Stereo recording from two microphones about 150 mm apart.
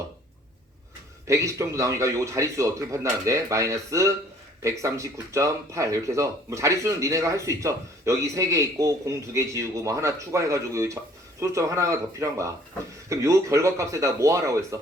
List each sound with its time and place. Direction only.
1.3 s speech: 20° right (ahead or behind)